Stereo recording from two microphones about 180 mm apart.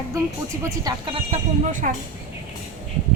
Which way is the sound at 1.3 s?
45° right (ahead or behind).